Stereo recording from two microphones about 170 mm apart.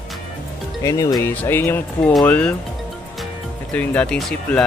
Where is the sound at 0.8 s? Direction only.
20° left (ahead or behind).